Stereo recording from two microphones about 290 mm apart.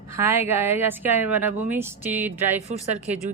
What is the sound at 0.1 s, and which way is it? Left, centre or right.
A woman's voice, centre.